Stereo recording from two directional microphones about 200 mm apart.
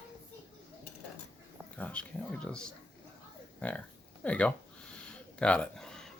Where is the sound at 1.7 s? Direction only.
5° left (ahead or behind).